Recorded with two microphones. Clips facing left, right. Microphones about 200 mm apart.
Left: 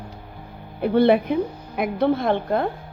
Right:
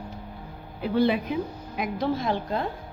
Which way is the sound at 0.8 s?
60° left (ahead or behind).